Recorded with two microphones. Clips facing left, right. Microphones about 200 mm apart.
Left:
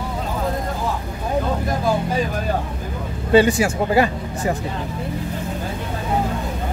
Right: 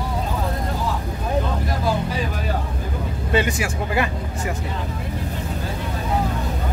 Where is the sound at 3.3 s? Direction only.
30° left (ahead or behind).